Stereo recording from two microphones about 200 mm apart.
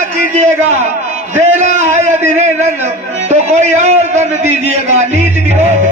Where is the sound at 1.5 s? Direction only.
35° right (ahead or behind).